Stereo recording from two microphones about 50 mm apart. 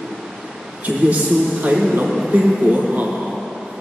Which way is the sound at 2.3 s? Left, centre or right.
Right.